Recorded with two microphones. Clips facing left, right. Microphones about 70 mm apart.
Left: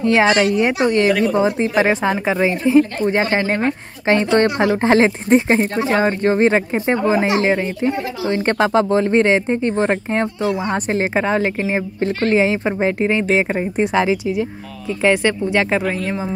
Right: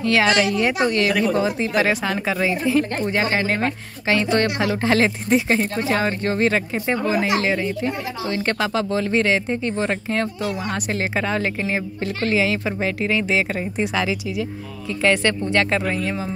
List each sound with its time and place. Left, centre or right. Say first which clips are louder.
0.0 s a woman's voice: left 4 dB; left
12.2 s speech: left 4 dB; left
14.9 s speech: left 3 dB; centre